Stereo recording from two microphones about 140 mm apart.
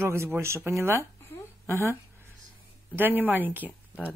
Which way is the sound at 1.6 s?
20° right (ahead or behind).